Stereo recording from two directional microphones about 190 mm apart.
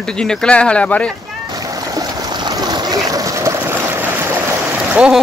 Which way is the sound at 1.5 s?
20° right (ahead or behind).